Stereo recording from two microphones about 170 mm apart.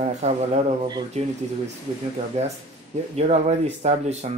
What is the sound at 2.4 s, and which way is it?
Speech, 40° right (ahead or behind).